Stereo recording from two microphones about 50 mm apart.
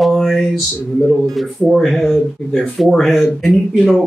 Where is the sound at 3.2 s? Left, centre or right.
Centre.